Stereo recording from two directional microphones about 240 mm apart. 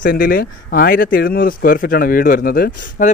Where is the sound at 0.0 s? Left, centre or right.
Left.